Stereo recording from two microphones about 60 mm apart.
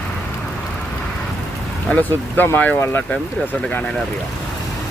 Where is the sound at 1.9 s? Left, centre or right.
Left.